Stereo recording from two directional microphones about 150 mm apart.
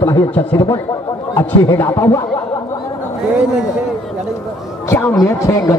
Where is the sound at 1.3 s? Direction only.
15° left (ahead or behind).